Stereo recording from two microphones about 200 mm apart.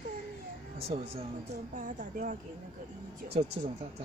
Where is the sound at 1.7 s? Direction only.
40° right (ahead or behind).